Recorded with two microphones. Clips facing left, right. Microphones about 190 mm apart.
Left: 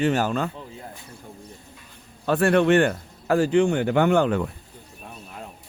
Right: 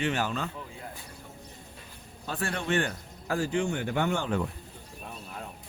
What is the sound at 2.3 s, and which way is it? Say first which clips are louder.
A man's voice: left 13 dB; 65° left (ahead or behind).